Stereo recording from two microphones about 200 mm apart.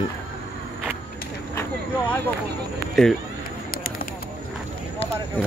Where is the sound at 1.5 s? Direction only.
10° left (ahead or behind).